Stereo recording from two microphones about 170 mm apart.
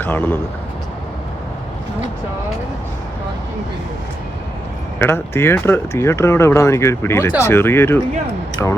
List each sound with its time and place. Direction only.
0.0 s speech: 10° left (ahead or behind)
4.9 s speech: 15° left (ahead or behind)